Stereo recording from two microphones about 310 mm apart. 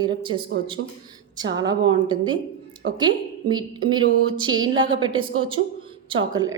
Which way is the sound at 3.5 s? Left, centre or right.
Centre.